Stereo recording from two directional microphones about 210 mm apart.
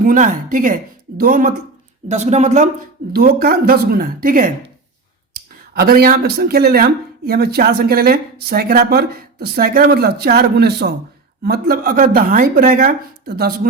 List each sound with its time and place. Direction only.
0.0 s speech: 40° right (ahead or behind)
3.1 s speech: 45° right (ahead or behind)
5.7 s speech: 45° right (ahead or behind)